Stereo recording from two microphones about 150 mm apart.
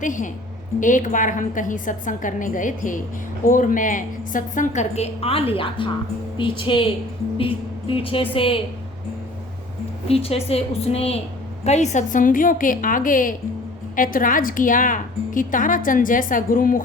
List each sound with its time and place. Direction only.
0.0 s a woman's voice: 60° left (ahead or behind); by 8.6 s 40° left (ahead or behind)
10.1 s a woman's voice: 40° left (ahead or behind); by 16.8 s 65° left (ahead or behind)